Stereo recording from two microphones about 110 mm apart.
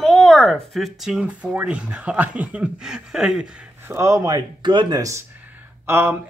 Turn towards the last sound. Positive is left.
turn(degrees=-20)  # may be behind; listen again after turning